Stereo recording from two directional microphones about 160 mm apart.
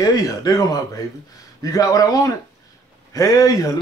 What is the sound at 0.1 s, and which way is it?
Speech, 20° left (ahead or behind).